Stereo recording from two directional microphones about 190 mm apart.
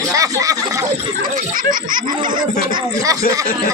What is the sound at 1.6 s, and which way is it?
Speech, 45° right (ahead or behind).